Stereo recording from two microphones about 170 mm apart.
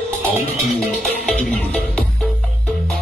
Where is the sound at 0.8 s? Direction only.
5° left (ahead or behind).